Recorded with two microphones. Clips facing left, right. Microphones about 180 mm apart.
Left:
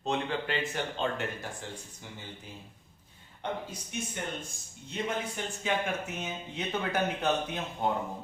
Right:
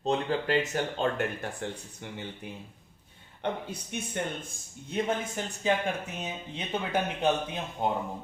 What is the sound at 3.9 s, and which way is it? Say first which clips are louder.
Speech: even; 60° right (ahead or behind).